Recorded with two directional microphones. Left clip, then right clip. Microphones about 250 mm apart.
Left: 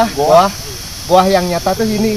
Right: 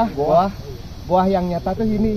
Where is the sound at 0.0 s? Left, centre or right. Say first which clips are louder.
Left 7 dB; centre.